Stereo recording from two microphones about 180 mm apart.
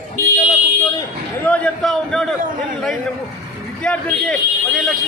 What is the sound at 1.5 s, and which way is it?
Speech, 5° left (ahead or behind).